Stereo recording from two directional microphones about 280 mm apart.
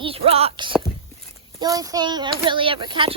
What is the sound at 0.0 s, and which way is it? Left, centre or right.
Speech, right.